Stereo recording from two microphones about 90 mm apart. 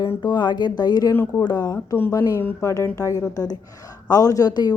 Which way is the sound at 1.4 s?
50° left (ahead or behind).